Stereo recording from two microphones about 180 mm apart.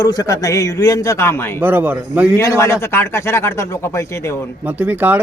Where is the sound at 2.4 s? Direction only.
15° left (ahead or behind).